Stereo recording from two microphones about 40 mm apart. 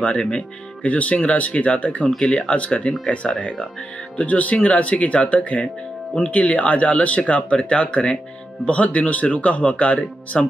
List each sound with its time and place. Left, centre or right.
0.0 s speech: left
2.1 s speech: left
4.2 s speech: left